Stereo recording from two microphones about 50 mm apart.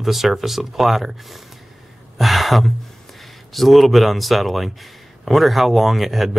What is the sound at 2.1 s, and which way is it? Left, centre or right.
Gasp, centre.